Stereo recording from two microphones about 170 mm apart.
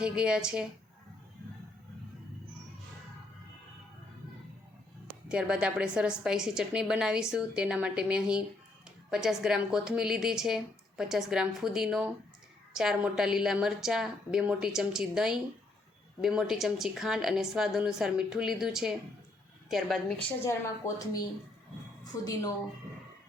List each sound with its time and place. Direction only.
0.0 s a woman's voice: 5° right (ahead or behind)
5.0 s a woman's voice: 5° right (ahead or behind)
20.4 s a woman's voice: 15° left (ahead or behind)
22.2 s a woman's voice: 20° left (ahead or behind)